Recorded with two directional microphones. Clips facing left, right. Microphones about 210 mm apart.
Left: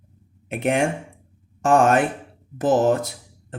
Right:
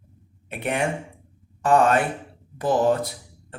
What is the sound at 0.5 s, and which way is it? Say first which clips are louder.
Speech: left 4 dB; 45° left (ahead or behind).